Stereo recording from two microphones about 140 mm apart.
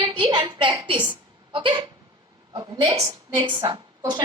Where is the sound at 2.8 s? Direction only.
30° right (ahead or behind).